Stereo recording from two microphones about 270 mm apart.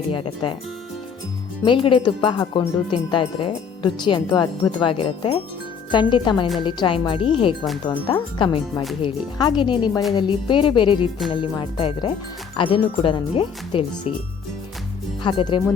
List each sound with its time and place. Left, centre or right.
0.1 s speech: centre
1.6 s speech: centre
15.2 s speech: centre